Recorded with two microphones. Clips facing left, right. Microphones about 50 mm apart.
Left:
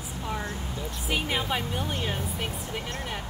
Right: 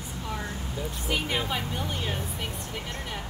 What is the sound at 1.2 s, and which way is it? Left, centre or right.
Speech, centre.